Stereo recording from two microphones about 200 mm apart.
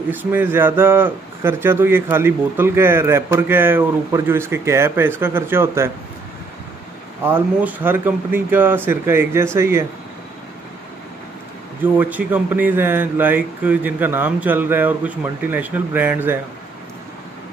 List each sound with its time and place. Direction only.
0.1 s speech: 10° right (ahead or behind)
7.2 s speech: 10° right (ahead or behind)
11.8 s speech: 10° right (ahead or behind)